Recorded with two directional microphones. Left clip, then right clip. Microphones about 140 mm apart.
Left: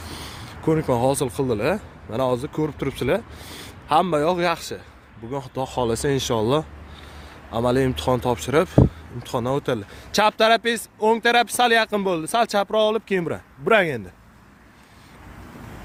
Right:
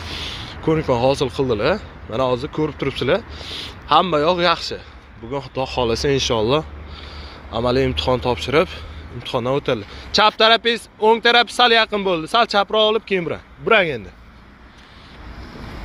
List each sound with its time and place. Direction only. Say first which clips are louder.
0.0 s speech: right 7 dB; 50° left (ahead or behind)
10.1 s speech: right 3 dB; 60° left (ahead or behind)